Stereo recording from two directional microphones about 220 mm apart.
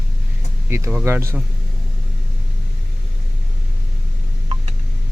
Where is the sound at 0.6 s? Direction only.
10° right (ahead or behind).